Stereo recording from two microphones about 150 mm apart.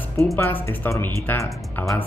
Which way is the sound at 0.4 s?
20° left (ahead or behind).